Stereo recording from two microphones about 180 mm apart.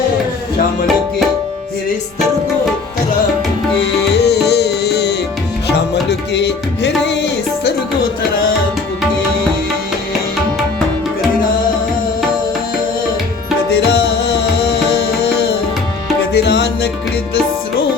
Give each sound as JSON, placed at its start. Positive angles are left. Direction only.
{"t": 4.1, "sound": "music", "side_deg": 65}
{"t": 13.7, "sound": "tabla", "side_deg": 65}
{"t": 16.3, "sound": "music", "side_deg": 70}